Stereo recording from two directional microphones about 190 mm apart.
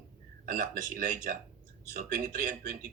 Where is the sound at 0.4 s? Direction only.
45° right (ahead or behind).